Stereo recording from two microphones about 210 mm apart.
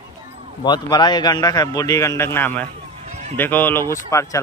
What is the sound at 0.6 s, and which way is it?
A man's voice, 20° left (ahead or behind).